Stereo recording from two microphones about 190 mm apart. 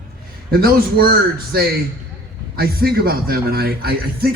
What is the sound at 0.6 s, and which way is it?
A man's voice, 50° right (ahead or behind).